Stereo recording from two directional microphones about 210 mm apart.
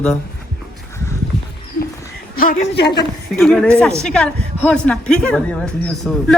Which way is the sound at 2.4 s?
40° left (ahead or behind).